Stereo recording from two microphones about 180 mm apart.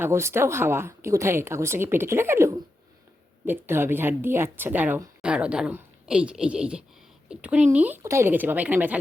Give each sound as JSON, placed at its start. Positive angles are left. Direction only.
{"t": 0.0, "sound": "a woman's voice", "side_deg": -15}